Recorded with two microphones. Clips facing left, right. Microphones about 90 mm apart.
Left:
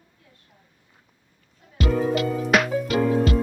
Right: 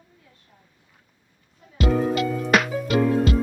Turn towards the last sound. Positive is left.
turn(degrees=0)  # may be behind; listen again after turning